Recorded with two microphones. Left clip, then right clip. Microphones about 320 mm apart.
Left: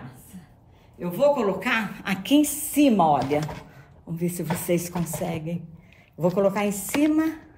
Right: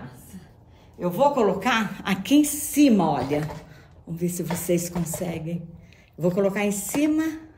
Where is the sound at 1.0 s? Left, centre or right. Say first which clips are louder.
Right 1 dB; centre.